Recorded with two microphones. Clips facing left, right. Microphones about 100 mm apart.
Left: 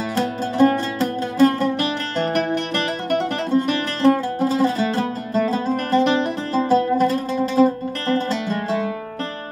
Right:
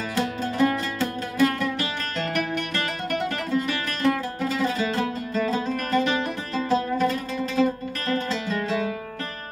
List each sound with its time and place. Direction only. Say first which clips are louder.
0.1 s music: left 3 dB; 35° left (ahead or behind)
3.7 s music: left 7 dB; 35° left (ahead or behind)